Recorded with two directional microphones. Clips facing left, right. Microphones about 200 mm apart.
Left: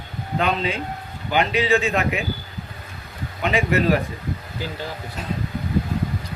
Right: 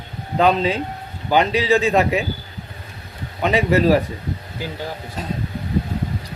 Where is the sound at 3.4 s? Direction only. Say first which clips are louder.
Right 4 dB; 35° right (ahead or behind).